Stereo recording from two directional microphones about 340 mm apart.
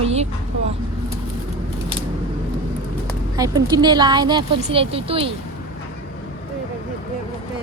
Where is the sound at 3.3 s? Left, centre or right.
Centre.